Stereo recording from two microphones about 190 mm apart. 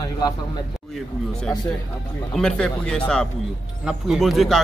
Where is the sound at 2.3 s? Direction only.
5° left (ahead or behind).